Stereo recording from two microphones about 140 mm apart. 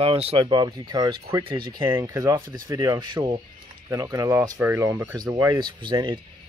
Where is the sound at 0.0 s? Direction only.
45° right (ahead or behind); by 5.1 s 15° right (ahead or behind).